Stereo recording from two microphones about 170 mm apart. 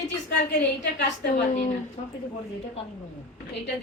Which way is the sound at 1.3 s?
50° left (ahead or behind).